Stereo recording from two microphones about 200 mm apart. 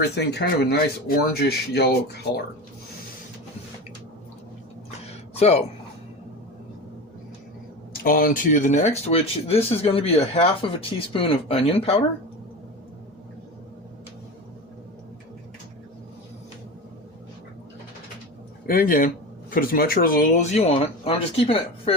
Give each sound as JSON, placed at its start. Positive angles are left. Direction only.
{"t": 0.2, "sound": "speech", "side_deg": 55}
{"t": 5.0, "sound": "a sound", "side_deg": 30}
{"t": 7.9, "sound": "speech", "side_deg": 45}
{"t": 18.6, "sound": "speech", "side_deg": 45}